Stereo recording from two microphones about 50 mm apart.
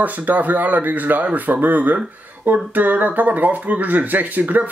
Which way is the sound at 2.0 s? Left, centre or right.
Right.